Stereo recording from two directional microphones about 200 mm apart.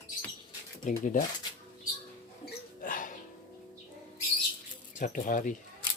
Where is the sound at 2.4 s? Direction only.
45° left (ahead or behind).